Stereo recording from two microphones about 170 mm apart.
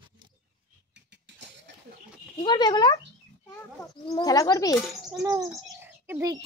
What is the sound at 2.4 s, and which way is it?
Speech, 25° left (ahead or behind).